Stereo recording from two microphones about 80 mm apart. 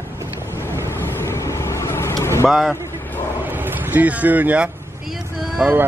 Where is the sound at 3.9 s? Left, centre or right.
Centre.